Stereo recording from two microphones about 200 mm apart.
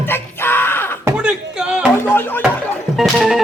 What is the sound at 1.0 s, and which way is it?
Speech, 10° right (ahead or behind).